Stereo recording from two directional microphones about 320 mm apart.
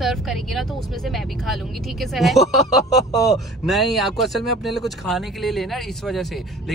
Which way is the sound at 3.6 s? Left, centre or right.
Centre.